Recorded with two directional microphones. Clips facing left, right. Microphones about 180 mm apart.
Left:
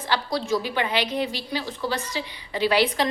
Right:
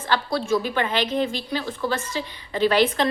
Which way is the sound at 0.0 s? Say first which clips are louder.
Right 2 dB; 15° left (ahead or behind).